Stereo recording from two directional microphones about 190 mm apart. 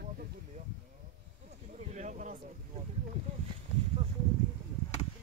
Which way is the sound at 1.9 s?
40° right (ahead or behind).